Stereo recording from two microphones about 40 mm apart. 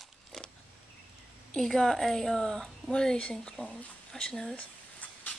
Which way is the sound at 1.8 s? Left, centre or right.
Centre.